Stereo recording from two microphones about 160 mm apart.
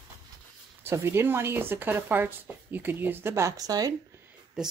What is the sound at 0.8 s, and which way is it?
Speech, 15° right (ahead or behind).